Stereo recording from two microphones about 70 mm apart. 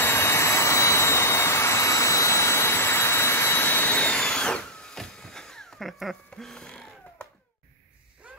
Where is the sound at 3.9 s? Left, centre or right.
Centre.